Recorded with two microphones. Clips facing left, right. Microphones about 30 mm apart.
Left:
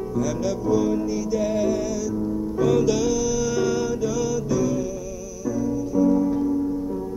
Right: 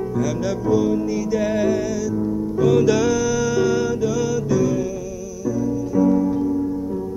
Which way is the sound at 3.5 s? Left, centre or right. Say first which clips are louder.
Right 4 dB; right.